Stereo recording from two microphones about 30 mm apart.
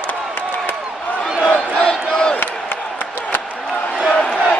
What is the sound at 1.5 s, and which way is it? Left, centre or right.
Crowd, left.